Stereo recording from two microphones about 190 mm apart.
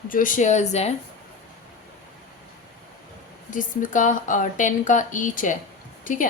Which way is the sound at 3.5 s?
45° left (ahead or behind).